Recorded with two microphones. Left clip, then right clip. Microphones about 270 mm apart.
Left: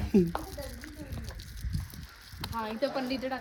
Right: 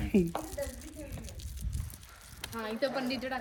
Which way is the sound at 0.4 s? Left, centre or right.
Left.